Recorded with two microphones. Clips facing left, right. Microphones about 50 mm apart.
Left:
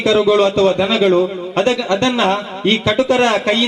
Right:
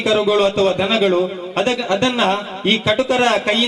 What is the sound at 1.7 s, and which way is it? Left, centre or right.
A man's voice, centre.